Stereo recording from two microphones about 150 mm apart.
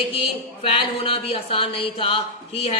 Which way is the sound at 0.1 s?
35° left (ahead or behind).